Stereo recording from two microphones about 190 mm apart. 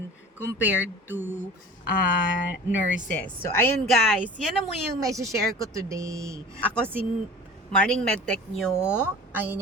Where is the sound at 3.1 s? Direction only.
10° left (ahead or behind).